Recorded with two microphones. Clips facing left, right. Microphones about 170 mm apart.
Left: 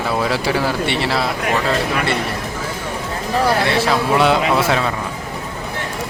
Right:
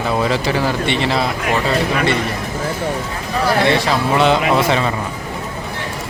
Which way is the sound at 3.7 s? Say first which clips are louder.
Even; 5° left (ahead or behind).